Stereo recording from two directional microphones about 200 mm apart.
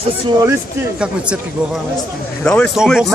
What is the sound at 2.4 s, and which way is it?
Speech, 5° left (ahead or behind).